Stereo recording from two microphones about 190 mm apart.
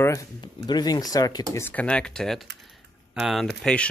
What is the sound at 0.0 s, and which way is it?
Speech, 15° left (ahead or behind).